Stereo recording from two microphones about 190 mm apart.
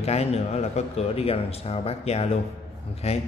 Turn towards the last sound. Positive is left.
turn(degrees=35)  # may be behind; listen again after turning